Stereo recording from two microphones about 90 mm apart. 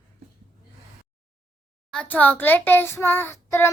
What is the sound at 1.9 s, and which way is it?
Speech, 20° left (ahead or behind).